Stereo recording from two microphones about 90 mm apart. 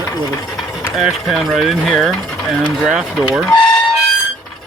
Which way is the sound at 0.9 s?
Centre (ahead or behind).